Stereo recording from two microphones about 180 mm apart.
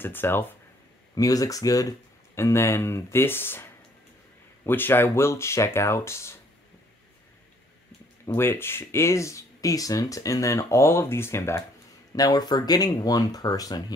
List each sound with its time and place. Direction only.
0.0 s speech: 10° left (ahead or behind)
8.3 s speech: 10° left (ahead or behind)